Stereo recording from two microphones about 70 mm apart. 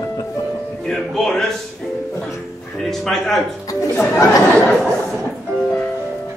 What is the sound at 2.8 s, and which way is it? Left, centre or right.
Speech, centre.